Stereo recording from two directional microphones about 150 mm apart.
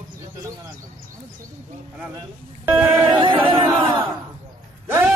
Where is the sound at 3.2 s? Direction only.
35° right (ahead or behind).